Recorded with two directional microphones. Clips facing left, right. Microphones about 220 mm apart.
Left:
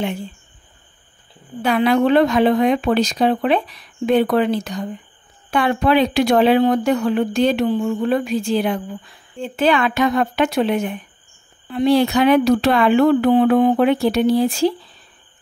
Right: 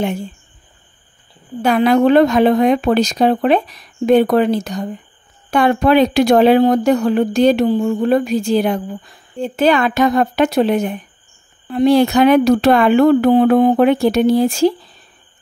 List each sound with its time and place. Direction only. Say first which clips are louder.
1.6 s speech: right 3 dB; 45° right (ahead or behind)